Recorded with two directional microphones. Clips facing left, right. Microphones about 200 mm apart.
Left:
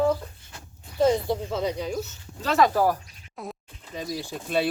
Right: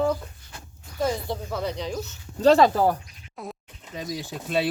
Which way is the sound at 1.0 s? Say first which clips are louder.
Left 5 dB; 25° left (ahead or behind).